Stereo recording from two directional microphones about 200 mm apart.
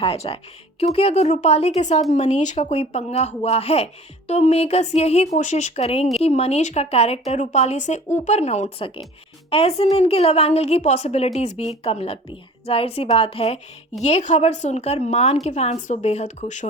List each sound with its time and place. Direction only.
0.0 s a woman's voice: 30° left (ahead or behind)